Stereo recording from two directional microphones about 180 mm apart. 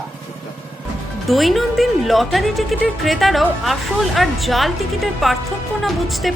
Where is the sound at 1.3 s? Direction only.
Centre (ahead or behind).